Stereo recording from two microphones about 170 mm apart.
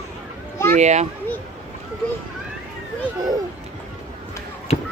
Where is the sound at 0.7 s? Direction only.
40° right (ahead or behind).